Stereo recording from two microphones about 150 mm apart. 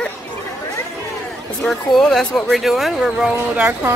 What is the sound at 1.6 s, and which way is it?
A woman's voice, centre (ahead or behind).